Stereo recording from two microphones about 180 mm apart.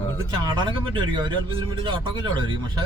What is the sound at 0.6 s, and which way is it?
Speech, 25° right (ahead or behind).